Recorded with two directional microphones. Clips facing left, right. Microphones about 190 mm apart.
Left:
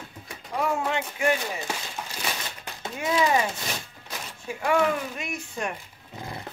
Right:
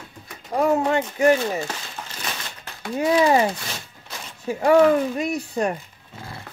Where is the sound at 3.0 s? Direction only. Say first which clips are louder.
Right 6 dB; 35° right (ahead or behind).